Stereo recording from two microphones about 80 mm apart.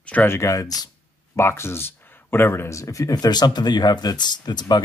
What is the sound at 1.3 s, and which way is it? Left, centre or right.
Speech, left.